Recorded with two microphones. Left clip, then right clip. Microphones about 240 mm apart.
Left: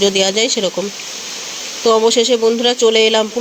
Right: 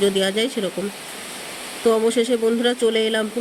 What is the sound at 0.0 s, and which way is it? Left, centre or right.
Speech, centre.